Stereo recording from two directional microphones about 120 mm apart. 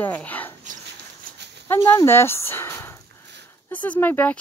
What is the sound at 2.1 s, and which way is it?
Speech, 20° left (ahead or behind).